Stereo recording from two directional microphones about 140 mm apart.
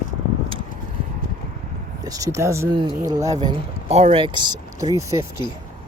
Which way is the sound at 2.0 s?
25° right (ahead or behind).